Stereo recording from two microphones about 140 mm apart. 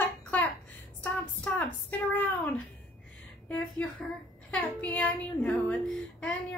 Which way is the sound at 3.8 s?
10° left (ahead or behind).